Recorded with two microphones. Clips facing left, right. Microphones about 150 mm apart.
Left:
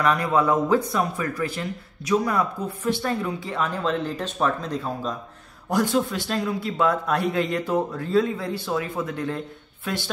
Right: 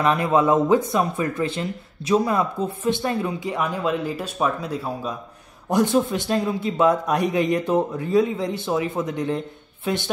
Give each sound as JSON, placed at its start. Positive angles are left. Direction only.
{"t": 0.0, "sound": "speech", "side_deg": -20}
{"t": 5.7, "sound": "speech", "side_deg": -20}